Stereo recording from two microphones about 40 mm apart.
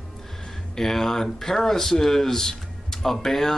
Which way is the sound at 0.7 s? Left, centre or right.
Centre.